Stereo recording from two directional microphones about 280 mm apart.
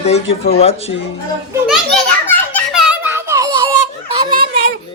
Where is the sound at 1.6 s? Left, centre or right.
Centre.